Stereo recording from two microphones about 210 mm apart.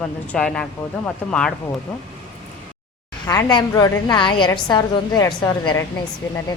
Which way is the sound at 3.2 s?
15° left (ahead or behind).